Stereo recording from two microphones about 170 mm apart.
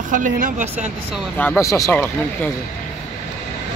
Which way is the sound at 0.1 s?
50° right (ahead or behind).